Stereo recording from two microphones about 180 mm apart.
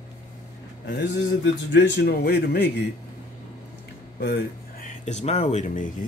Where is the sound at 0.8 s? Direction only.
75° left (ahead or behind).